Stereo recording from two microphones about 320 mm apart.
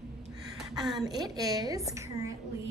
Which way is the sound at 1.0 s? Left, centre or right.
Centre.